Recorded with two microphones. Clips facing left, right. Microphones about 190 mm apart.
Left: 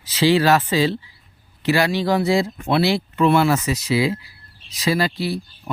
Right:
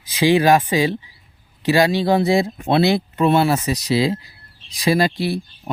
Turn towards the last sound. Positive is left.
turn(degrees=-15)  # may be behind; listen again after turning